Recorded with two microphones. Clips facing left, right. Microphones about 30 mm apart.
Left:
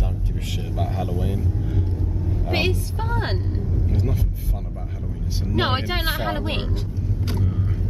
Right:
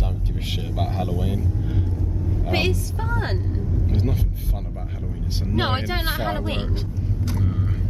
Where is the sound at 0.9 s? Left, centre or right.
Centre.